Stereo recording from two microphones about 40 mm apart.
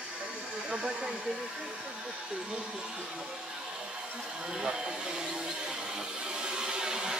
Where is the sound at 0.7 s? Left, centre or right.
Centre.